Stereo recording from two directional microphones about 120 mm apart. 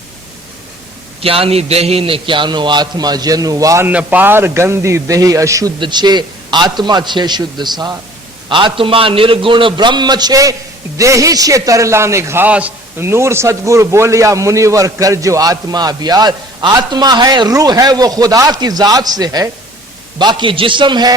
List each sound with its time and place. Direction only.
1.2 s a man's voice: 50° right (ahead or behind); by 3.8 s 30° right (ahead or behind)
3.8 s a man's voice: 15° right (ahead or behind)
5.8 s a man's voice: 35° right (ahead or behind); by 12.5 s 20° right (ahead or behind)
12.5 s a man's voice: 10° right (ahead or behind)
13.0 s a man's voice: 20° right (ahead or behind)